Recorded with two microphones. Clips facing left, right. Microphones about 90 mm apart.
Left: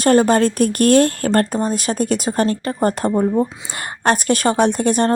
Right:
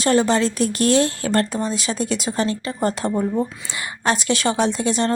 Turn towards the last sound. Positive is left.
turn(degrees=50)  # may be behind; listen again after turning